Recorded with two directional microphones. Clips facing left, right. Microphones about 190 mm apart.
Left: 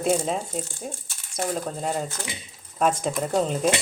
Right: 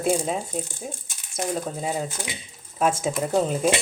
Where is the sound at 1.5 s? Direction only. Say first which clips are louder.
Even; 5° right (ahead or behind).